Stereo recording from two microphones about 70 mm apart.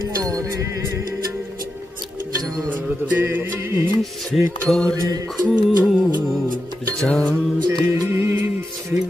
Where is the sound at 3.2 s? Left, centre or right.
Right.